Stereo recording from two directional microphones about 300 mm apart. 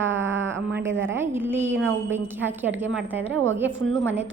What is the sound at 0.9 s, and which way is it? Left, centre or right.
Speech, right.